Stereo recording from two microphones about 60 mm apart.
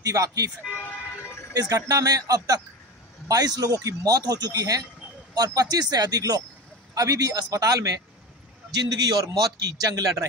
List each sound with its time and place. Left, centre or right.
0.0 s speech: right
1.5 s speech: right
8.8 s speech: right